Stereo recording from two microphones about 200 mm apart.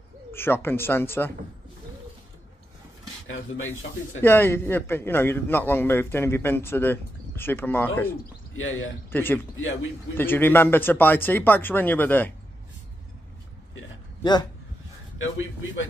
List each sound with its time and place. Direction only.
0.3 s a man's voice: 10° left (ahead or behind)
3.3 s speech: 80° left
4.2 s a man's voice: 10° left (ahead or behind)
8.5 s speech: 80° left
9.1 s a man's voice: 10° left (ahead or behind)
15.1 s a man's voice: 75° left (ahead or behind)